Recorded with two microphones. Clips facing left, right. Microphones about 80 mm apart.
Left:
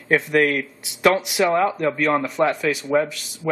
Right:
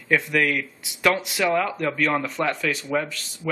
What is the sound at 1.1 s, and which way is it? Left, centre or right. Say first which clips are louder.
Speech: left 4 dB; centre.